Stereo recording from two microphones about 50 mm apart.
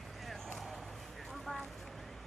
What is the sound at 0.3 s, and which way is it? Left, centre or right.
Vehicle, centre.